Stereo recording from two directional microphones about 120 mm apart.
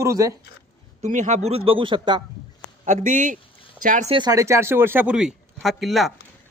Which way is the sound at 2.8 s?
90° right.